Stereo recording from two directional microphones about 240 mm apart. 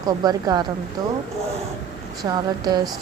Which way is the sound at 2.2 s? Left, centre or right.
Centre.